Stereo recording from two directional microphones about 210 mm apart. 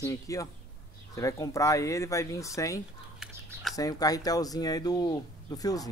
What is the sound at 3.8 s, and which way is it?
Speech, 15° left (ahead or behind).